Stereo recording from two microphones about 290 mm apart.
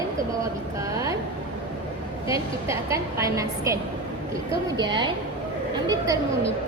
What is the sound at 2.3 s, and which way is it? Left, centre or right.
A woman's voice, centre.